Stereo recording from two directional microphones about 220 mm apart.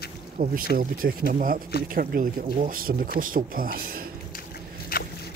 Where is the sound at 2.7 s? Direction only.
40° right (ahead or behind).